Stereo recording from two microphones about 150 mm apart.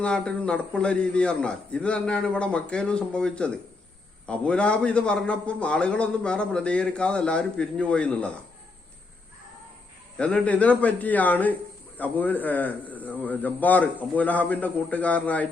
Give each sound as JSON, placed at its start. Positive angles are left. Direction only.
{"t": 0.0, "sound": "a man's voice", "side_deg": 5}
{"t": 10.2, "sound": "a man's voice", "side_deg": 10}